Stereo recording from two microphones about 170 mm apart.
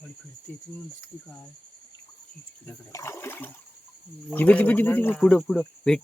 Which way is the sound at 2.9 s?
15° left (ahead or behind).